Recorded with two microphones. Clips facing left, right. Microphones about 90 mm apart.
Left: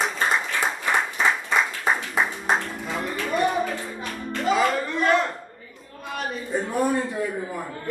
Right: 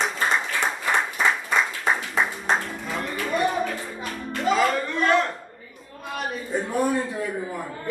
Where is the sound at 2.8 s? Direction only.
5° left (ahead or behind).